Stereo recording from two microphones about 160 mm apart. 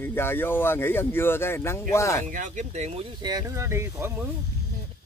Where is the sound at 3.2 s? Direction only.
25° right (ahead or behind).